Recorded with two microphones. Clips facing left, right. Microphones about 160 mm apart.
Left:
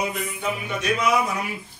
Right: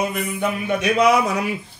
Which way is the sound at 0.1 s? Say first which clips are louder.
Right 5 dB; 60° right (ahead or behind).